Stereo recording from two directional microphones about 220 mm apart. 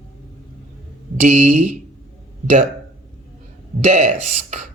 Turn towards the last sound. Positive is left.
turn(degrees=-30)  # may be behind; listen again after turning